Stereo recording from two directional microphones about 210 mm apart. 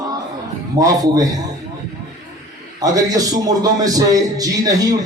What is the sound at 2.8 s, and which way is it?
A man's voice, 15° right (ahead or behind).